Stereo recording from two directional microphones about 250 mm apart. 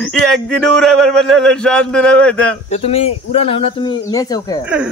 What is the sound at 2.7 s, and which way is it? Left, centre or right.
Speech, left.